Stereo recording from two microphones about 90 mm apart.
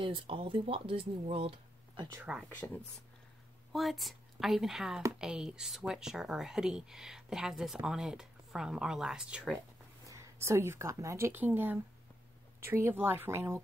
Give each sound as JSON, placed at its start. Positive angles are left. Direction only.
{"t": 0.0, "sound": "speech", "side_deg": -75}
{"t": 2.3, "sound": "speech", "side_deg": -10}
{"t": 3.7, "sound": "speech", "side_deg": 0}
{"t": 10.0, "sound": "speech", "side_deg": -35}